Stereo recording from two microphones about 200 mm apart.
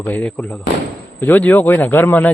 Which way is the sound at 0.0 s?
10° left (ahead or behind).